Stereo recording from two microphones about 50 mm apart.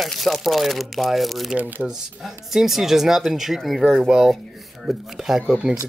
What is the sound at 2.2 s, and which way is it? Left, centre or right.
Speech, centre.